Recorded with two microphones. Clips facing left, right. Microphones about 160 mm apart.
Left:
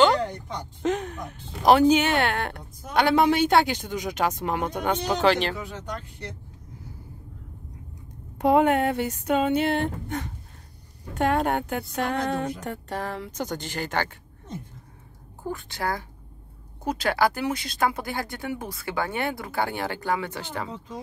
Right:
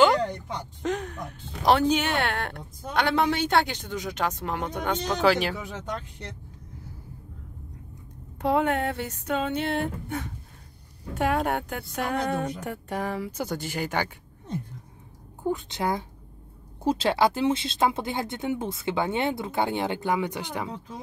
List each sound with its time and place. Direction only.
0.8 s a sound: centre (ahead or behind)
1.7 s a woman's voice: 5° left (ahead or behind)
5.2 s a woman's voice: 5° right (ahead or behind)
8.4 s a woman's voice: 15° left (ahead or behind); by 14.1 s 10° right (ahead or behind)
15.4 s speech: 20° right (ahead or behind)